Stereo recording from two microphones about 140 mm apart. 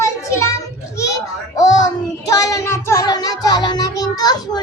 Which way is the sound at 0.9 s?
25° left (ahead or behind).